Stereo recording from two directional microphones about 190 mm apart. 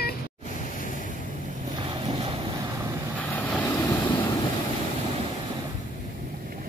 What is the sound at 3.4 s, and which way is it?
Vehicle, 5° left (ahead or behind).